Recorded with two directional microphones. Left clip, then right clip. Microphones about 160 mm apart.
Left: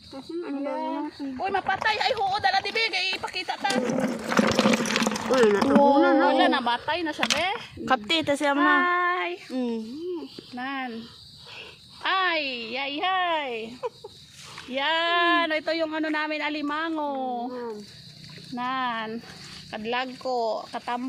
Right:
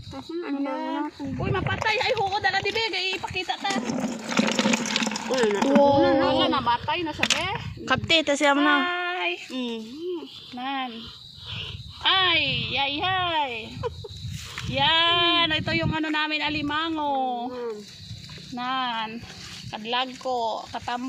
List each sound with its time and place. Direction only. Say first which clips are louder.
0.4 s speech: even; 35° right (ahead or behind)
1.5 s speech: even; 25° left (ahead or behind)
4.1 s a sound: left 1 dB; 20° left (ahead or behind); by 5.4 s 35° left (ahead or behind)
5.5 s a woman's voice: even; 5° left (ahead or behind)
6.2 s speech: left 1 dB; 45° left (ahead or behind)
7.9 s a woman's voice: right 2 dB; 5° left (ahead or behind)
8.4 s a woman's voice: right 2 dB; 10° right (ahead or behind)
9.0 s female singing: left 2 dB; 15° left (ahead or behind)
9.6 s speech: left 1 dB; 40° left (ahead or behind)
10.5 s a woman's voice: right 2 dB; 5° left (ahead or behind)
12.0 s a woman's voice: right 4 dB; 20° left (ahead or behind)
14.7 s speech: right 3 dB; 15° left (ahead or behind)